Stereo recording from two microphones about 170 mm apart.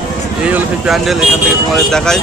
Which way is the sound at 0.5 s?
Centre (ahead or behind).